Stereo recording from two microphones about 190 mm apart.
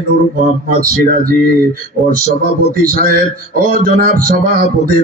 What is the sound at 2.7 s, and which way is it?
Speech, 50° right (ahead or behind).